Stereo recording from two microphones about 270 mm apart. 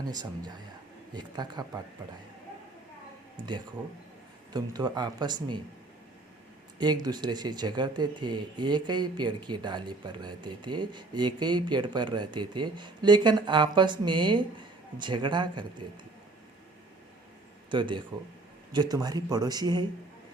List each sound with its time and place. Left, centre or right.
0.1 s speech: centre
3.3 s speech: centre
6.7 s speech: centre
17.7 s speech: centre